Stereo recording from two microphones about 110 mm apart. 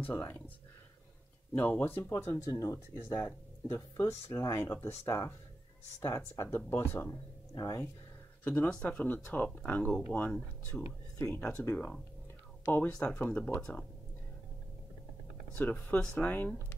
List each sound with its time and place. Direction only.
0.0 s speech: 20° left (ahead or behind)
1.5 s speech: 20° left (ahead or behind)
3.2 s speech: 15° left (ahead or behind)
3.9 s speech: 25° left (ahead or behind)
7.5 s speech: 35° left (ahead or behind)
8.5 s speech: 10° left (ahead or behind)
15.5 s speech: 20° left (ahead or behind)